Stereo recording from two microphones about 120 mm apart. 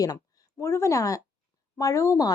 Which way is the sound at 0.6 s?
20° left (ahead or behind).